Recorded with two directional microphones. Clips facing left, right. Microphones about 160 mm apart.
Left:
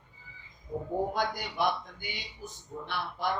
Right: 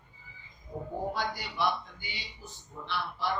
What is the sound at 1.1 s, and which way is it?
A man's voice, 50° left (ahead or behind).